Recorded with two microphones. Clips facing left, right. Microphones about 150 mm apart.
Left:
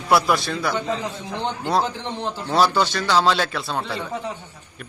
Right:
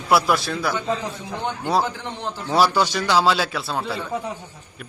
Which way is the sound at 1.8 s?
20° left (ahead or behind).